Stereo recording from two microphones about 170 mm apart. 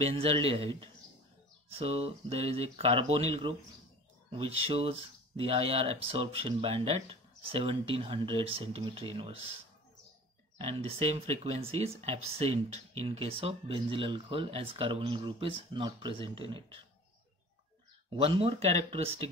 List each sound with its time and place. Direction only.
0.0 s speech: 35° right (ahead or behind)
10.6 s speech: 35° right (ahead or behind)
18.1 s speech: 35° right (ahead or behind)